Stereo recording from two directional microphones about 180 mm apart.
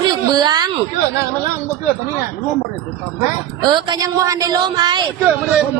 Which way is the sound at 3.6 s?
25° right (ahead or behind).